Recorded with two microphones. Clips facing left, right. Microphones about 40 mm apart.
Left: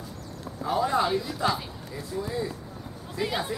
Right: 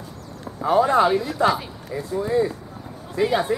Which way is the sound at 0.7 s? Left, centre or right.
Right.